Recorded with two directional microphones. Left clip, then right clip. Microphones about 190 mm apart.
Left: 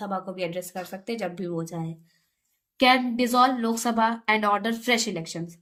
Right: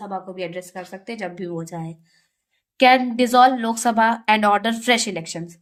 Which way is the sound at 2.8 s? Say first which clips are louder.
Right 6 dB; 40° right (ahead or behind).